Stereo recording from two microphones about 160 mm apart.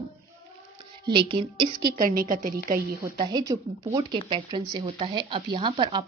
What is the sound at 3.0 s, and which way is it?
Speech, 25° right (ahead or behind).